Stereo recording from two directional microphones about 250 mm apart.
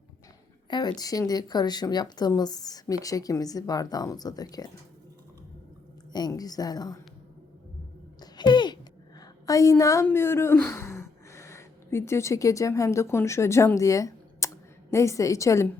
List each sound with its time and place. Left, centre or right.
0.7 s speech: centre
6.1 s speech: centre
8.2 s a sound: centre
9.2 s a woman's voice: centre